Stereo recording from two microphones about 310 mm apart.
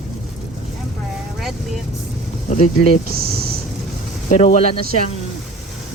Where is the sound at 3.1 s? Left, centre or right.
Right.